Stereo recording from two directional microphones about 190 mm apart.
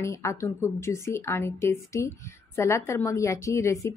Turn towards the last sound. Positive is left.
turn(degrees=15)  # may be behind; listen again after turning